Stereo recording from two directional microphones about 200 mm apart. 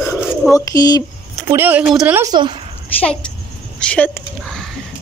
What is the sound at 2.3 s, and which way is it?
Speech, 25° right (ahead or behind).